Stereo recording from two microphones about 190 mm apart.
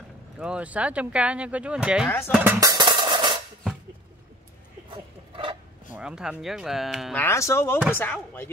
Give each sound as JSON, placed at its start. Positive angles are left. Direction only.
{"t": 0.4, "sound": "speech", "side_deg": -5}
{"t": 2.0, "sound": "speech", "side_deg": 10}
{"t": 2.3, "sound": "music", "side_deg": -15}
{"t": 4.9, "sound": "a sound", "side_deg": -25}
{"t": 5.9, "sound": "speech", "side_deg": -5}
{"t": 7.2, "sound": "speech", "side_deg": 15}